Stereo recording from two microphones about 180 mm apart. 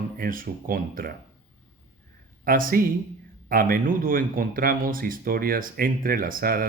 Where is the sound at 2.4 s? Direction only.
50° right (ahead or behind).